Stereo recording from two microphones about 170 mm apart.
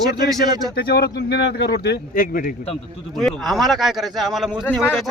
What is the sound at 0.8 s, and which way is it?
A man's voice, 65° left (ahead or behind).